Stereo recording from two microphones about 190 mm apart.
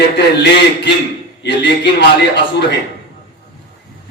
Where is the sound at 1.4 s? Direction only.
65° left (ahead or behind).